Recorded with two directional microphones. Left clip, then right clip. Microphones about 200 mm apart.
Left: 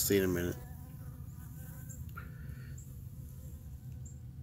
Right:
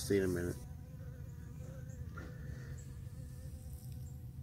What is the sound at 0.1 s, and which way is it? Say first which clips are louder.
Insect: left 2 dB; 20° left (ahead or behind).